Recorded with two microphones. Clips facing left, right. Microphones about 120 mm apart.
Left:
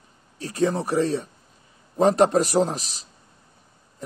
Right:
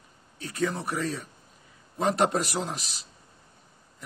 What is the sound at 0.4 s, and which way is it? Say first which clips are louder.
Speech: left 6 dB; 35° left (ahead or behind).